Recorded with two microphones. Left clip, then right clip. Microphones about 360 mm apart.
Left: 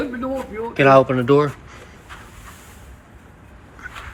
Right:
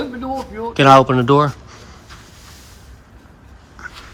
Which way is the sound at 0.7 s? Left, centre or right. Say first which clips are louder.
Right 3 dB; centre.